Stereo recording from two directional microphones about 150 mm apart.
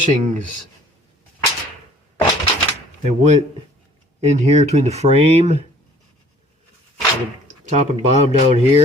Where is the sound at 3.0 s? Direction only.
50° right (ahead or behind).